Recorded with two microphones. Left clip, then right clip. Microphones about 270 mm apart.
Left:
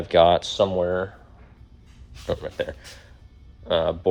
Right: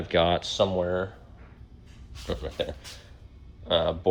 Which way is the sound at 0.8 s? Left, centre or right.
Left.